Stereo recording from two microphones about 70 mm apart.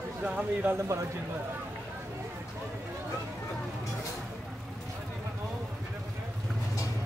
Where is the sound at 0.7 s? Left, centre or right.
Right.